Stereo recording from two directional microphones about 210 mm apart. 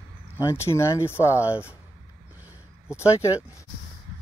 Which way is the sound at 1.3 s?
10° right (ahead or behind).